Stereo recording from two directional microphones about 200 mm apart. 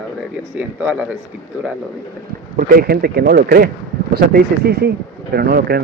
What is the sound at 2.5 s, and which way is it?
Speech, 45° right (ahead or behind).